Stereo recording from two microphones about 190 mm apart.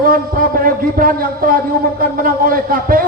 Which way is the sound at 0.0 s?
50° right (ahead or behind).